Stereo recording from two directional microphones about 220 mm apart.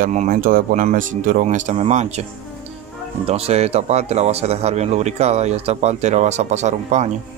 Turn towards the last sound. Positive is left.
turn(degrees=-30)  # may be behind; listen again after turning